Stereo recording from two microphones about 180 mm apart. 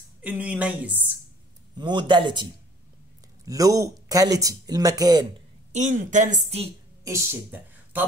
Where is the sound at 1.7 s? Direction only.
25° right (ahead or behind).